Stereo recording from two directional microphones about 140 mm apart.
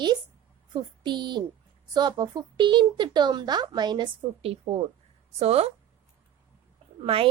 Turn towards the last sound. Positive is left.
turn(degrees=-40)  # may be behind; listen again after turning